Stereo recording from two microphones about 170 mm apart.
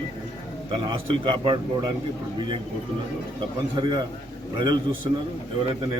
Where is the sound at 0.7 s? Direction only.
30° right (ahead or behind).